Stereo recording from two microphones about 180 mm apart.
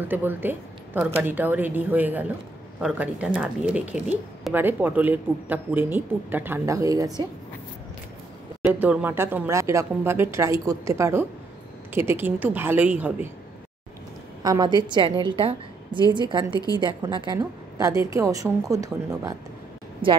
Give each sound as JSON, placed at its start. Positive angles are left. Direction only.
{"t": 0.1, "sound": "speech", "side_deg": -10}
{"t": 8.6, "sound": "speech", "side_deg": -5}
{"t": 14.4, "sound": "a woman's voice", "side_deg": -20}
{"t": 16.5, "sound": "a woman's voice", "side_deg": 20}
{"t": 16.8, "sound": "a woman's voice", "side_deg": -25}